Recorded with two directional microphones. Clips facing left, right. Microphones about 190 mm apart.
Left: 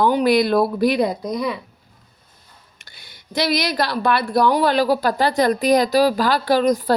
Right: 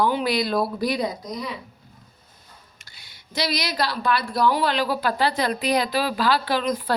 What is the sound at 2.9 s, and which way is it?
A woman's voice, 55° left (ahead or behind).